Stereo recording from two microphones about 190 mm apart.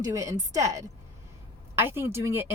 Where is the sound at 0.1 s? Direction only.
15° right (ahead or behind).